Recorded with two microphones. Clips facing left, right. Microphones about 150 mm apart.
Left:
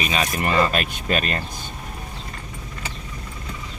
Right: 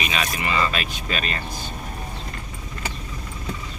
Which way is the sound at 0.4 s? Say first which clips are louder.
Left 5 dB; 50° left (ahead or behind).